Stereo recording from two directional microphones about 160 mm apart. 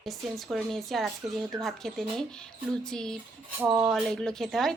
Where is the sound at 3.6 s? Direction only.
15° right (ahead or behind).